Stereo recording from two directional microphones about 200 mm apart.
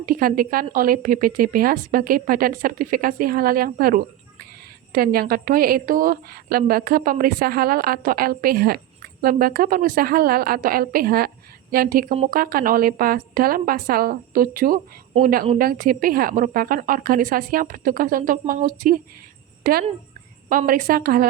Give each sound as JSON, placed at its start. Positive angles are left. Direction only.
{"t": 0.0, "sound": "a woman's voice", "side_deg": -45}